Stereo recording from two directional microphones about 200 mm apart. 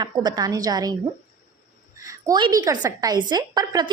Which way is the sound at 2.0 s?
15° right (ahead or behind).